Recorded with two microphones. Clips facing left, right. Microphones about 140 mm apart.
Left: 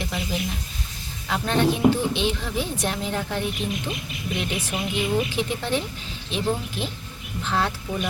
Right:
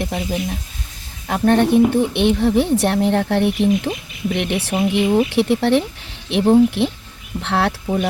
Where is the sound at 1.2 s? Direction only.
55° right (ahead or behind).